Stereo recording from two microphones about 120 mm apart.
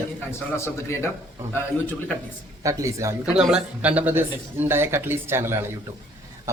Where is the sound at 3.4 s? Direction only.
5° right (ahead or behind).